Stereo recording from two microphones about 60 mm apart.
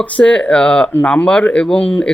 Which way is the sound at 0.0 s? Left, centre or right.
Centre.